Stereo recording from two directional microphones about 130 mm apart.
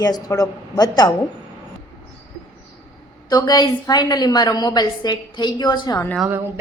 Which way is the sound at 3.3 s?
30° left (ahead or behind).